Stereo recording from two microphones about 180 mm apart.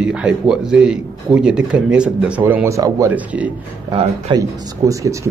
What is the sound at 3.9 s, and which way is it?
Speech, 25° right (ahead or behind).